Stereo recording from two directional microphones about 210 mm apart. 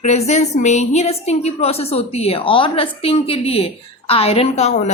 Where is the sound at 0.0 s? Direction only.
30° left (ahead or behind).